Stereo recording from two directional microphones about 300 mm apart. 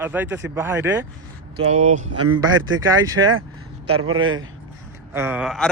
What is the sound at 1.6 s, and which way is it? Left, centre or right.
Speech, right.